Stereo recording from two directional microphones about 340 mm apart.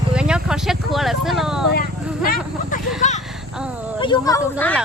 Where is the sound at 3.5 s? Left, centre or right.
Centre.